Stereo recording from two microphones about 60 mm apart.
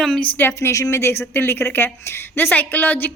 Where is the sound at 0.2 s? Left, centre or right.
Left.